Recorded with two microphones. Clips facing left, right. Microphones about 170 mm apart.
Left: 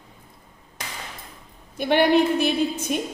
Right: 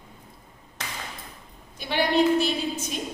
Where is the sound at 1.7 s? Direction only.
55° left (ahead or behind).